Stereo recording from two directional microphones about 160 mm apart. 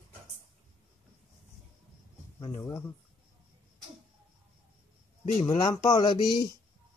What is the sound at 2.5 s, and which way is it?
Speech, 15° left (ahead or behind).